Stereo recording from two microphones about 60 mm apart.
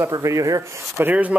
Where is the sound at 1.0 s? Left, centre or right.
Right.